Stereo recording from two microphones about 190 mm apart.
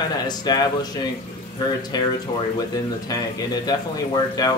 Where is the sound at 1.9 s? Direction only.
20° left (ahead or behind).